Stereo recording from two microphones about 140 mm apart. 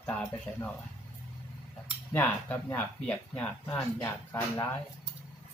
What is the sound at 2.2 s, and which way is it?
Speech, 10° left (ahead or behind).